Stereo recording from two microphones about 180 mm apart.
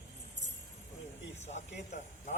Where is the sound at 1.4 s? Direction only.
40° left (ahead or behind).